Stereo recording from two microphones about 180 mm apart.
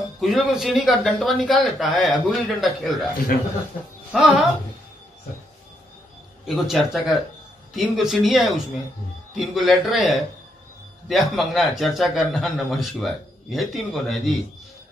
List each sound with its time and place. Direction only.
0.2 s a man's voice: centre (ahead or behind)
4.1 s a man's voice: centre (ahead or behind)
6.4 s a man's voice: centre (ahead or behind)